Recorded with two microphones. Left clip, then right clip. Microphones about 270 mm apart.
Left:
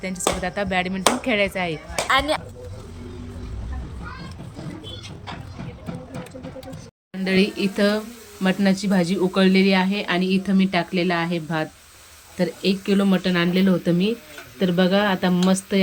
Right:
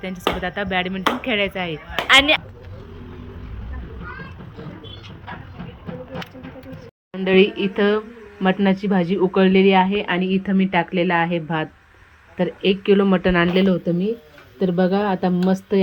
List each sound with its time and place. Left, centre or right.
0.0 s speech: centre
2.0 s a sound: left
7.1 s speech: centre
14.6 s speech: centre